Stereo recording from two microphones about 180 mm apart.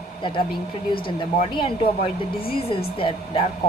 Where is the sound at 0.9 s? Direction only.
30° left (ahead or behind).